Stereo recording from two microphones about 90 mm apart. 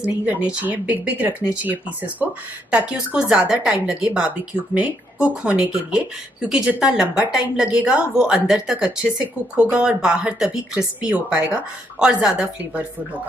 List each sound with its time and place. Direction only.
0.0 s speech: 15° right (ahead or behind)